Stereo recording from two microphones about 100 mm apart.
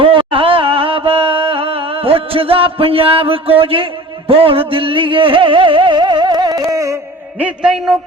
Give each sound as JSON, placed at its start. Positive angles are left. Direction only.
{"t": 0.0, "sound": "music", "side_deg": -60}
{"t": 3.6, "sound": "a man's voice", "side_deg": -65}
{"t": 4.3, "sound": "music", "side_deg": -70}
{"t": 7.3, "sound": "a man's voice", "side_deg": -15}